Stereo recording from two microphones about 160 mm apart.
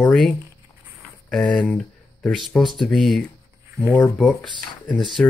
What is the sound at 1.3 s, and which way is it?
Speech, 5° left (ahead or behind).